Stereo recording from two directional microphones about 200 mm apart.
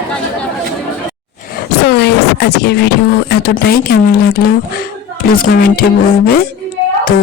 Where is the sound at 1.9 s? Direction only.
55° left (ahead or behind).